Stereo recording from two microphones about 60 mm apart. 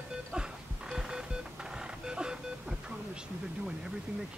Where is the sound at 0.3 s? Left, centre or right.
Centre.